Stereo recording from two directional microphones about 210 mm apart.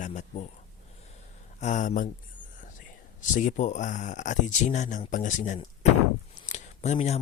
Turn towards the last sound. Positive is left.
turn(degrees=30)  # may be behind; listen again after turning